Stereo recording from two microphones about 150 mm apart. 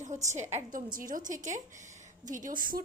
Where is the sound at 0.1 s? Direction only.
50° right (ahead or behind).